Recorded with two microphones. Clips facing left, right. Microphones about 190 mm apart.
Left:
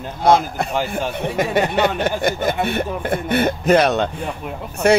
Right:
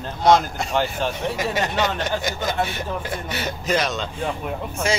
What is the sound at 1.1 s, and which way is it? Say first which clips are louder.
Speech: left 5 dB; 55° left (ahead or behind).